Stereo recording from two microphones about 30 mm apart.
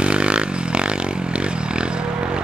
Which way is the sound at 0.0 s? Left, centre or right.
Right.